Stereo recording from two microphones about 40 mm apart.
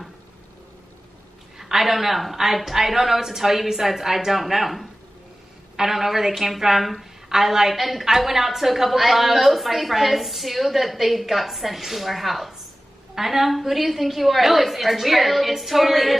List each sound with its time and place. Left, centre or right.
1.6 s a woman's voice: centre